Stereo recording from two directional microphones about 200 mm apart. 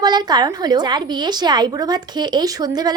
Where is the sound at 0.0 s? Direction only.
20° right (ahead or behind).